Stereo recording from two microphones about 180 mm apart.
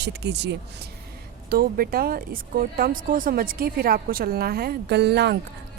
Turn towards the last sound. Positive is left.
turn(degrees=-70)  # may be behind; listen again after turning